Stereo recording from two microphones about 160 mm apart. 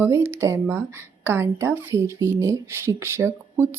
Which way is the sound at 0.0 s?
15° right (ahead or behind).